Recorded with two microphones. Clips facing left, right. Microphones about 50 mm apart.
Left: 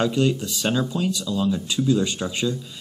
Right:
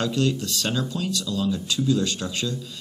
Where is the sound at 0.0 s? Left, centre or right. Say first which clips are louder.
Left 3 dB; centre.